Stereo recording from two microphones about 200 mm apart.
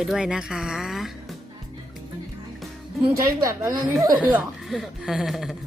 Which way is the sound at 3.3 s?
15° right (ahead or behind).